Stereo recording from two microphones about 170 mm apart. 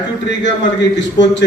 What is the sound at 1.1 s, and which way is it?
Speech, 90° left.